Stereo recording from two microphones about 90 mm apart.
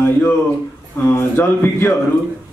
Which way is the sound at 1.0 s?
25° left (ahead or behind).